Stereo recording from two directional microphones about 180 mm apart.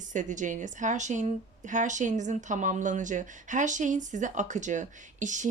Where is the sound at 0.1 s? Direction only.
45° right (ahead or behind).